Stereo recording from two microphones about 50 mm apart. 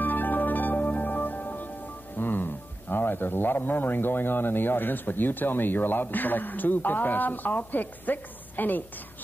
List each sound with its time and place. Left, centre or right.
0.0 s music: left
2.1 s speech: left